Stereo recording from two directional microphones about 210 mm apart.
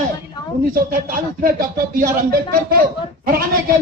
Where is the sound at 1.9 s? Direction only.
45° right (ahead or behind).